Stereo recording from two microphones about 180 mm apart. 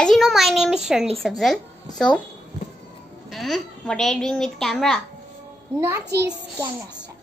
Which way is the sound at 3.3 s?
Centre (ahead or behind).